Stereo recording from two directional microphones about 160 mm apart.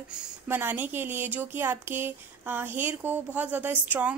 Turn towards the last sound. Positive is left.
turn(degrees=-10)  # may be behind; listen again after turning